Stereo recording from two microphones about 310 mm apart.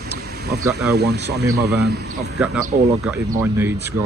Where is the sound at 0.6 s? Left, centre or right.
Centre.